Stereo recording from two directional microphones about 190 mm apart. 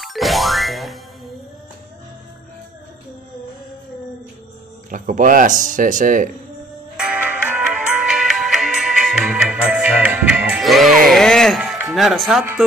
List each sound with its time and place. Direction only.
0.0 s music: centre (ahead or behind)
4.9 s speech: 45° right (ahead or behind)
7.0 s music: 5° right (ahead or behind)
11.9 s speech: centre (ahead or behind)